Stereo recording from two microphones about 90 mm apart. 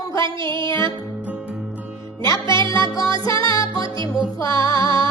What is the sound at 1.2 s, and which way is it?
Music, 15° right (ahead or behind).